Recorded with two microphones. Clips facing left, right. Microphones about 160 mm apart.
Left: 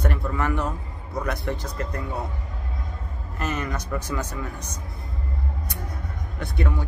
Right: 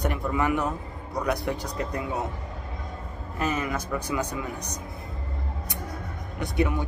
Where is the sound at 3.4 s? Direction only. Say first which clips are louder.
Right 1 dB; 10° right (ahead or behind).